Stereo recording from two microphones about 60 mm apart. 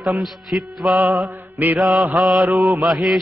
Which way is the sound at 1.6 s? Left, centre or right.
Right.